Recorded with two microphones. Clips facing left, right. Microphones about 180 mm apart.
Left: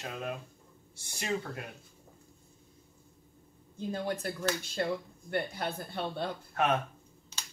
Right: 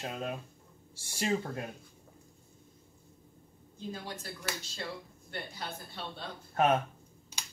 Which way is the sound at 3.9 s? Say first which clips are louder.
Left 8 dB; 55° left (ahead or behind).